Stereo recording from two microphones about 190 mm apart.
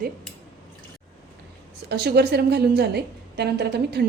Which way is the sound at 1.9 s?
60° right (ahead or behind).